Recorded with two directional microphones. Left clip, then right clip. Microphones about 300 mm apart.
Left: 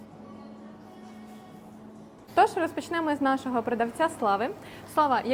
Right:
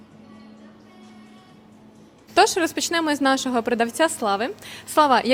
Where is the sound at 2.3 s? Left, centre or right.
Right.